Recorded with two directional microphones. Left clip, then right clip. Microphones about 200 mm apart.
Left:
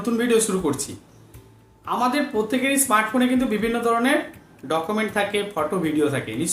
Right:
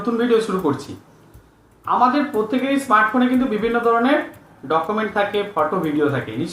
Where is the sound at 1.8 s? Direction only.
25° left (ahead or behind).